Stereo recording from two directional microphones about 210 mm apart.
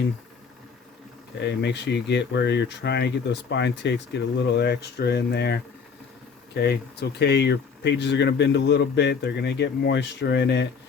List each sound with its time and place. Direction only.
1.4 s a man's voice: 55° left (ahead or behind)